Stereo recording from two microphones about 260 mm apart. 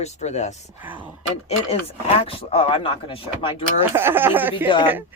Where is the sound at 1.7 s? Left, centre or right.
Left.